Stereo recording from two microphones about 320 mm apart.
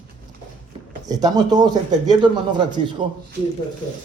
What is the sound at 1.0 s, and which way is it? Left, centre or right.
A man's voice, centre.